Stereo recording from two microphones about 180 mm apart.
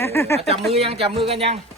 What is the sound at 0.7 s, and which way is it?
Speech, 35° right (ahead or behind).